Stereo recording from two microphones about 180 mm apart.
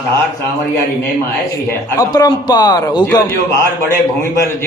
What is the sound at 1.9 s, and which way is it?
A man's voice, 20° left (ahead or behind).